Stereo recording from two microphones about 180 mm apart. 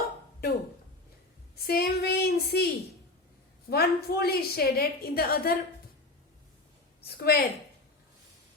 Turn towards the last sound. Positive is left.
turn(degrees=60)  # may be behind; listen again after turning